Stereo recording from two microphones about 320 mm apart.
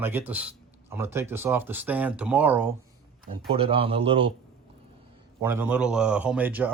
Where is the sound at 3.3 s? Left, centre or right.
Centre.